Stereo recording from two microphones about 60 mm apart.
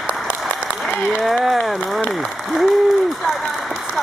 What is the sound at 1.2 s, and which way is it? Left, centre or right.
Speech, centre.